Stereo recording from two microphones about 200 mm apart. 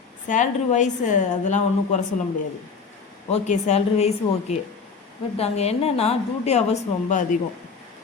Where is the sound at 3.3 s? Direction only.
35° left (ahead or behind).